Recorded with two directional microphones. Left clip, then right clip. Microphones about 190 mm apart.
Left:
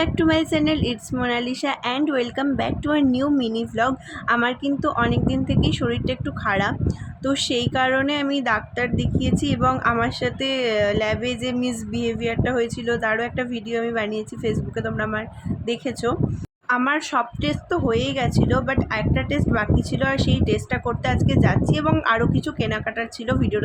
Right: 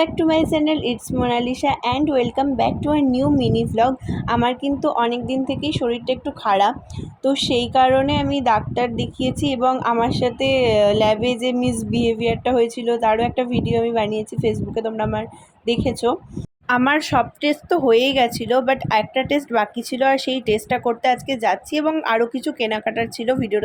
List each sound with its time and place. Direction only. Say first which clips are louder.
0.0 s a woman's voice: right 2 dB; 5° right (ahead or behind)